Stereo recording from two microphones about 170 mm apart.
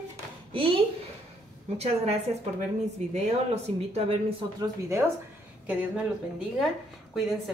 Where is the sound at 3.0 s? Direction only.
40° right (ahead or behind).